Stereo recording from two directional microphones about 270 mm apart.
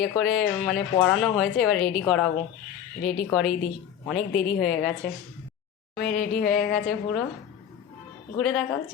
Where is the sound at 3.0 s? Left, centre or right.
Left.